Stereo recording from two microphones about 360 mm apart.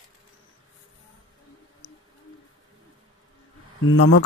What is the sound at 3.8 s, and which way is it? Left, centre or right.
Speech, left.